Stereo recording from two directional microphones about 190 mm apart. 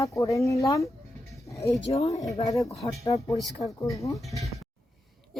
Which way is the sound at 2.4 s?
15° left (ahead or behind).